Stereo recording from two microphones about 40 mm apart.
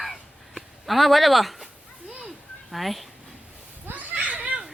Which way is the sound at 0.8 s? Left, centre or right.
Centre.